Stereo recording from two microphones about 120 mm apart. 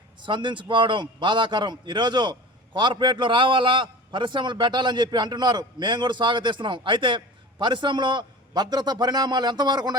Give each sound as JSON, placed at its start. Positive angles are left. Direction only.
{"t": 0.2, "sound": "a man's voice", "side_deg": -40}